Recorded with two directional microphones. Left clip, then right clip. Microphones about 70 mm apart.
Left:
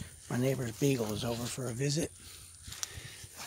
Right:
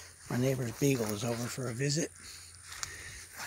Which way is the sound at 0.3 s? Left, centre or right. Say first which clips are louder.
Even; centre.